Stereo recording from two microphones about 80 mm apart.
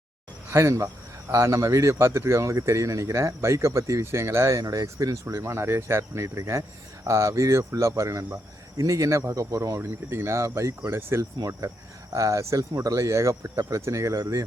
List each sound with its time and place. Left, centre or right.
0.5 s speech: right